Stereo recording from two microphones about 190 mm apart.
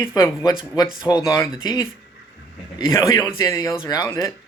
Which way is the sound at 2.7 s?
20° left (ahead or behind).